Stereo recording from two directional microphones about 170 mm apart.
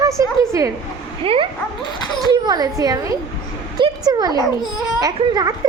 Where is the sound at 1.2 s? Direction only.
35° right (ahead or behind).